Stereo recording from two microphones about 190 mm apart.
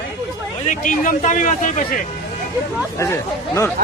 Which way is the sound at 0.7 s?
40° left (ahead or behind).